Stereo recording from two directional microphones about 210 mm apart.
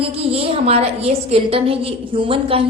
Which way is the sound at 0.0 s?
25° right (ahead or behind).